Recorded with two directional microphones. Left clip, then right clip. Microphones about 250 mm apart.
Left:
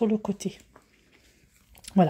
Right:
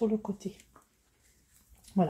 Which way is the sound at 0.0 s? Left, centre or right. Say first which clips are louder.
Left 5 dB; left.